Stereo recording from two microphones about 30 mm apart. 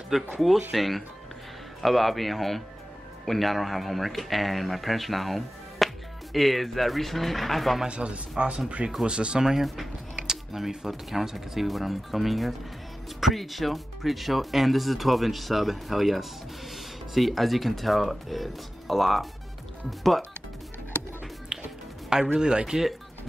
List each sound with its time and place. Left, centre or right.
0.1 s speech: centre
7.9 s a man's voice: right
9.6 s speech: centre
10.2 s computer keyboard: centre
10.9 s speech: centre
21.5 s music: centre
22.1 s a man's voice: right